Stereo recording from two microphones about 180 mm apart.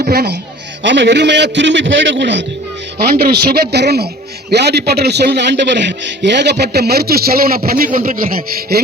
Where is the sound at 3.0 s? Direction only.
60° right (ahead or behind).